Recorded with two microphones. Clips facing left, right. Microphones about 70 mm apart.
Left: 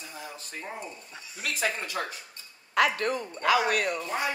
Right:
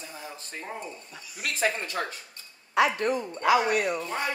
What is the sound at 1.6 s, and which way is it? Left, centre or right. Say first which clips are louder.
Speech: right 3 dB; right.